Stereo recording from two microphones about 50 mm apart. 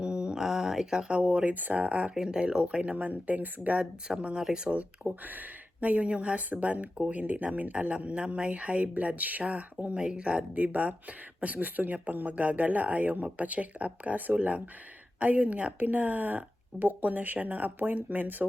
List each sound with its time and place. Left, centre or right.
0.0 s a sound: centre
1.2 s speech: right
2.1 s speech: centre
4.8 s speech: right
9.9 s speech: right